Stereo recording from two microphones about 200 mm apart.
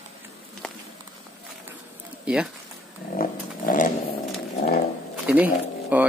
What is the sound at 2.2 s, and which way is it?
Speech, 5° right (ahead or behind).